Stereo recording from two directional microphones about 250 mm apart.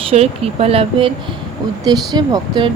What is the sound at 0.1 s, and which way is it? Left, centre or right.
Speech, right.